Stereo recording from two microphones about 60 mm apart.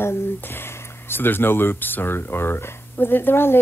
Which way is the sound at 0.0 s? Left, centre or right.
Left.